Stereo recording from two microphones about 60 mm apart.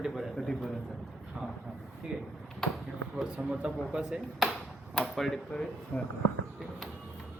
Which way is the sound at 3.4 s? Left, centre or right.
Centre.